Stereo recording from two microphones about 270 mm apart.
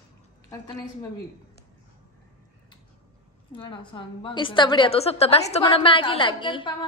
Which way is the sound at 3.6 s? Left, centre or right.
Centre.